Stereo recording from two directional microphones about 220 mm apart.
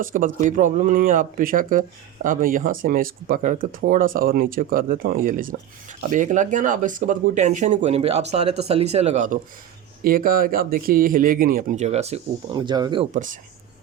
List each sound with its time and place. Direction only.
0.0 s speech: 35° right (ahead or behind)
12.5 s speech: 20° right (ahead or behind)